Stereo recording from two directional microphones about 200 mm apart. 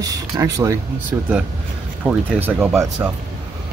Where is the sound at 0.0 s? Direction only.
20° right (ahead or behind).